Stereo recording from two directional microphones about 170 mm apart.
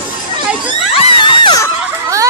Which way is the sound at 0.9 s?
30° left (ahead or behind).